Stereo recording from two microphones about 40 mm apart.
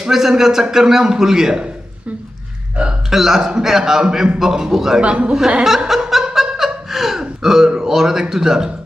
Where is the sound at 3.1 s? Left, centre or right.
Centre.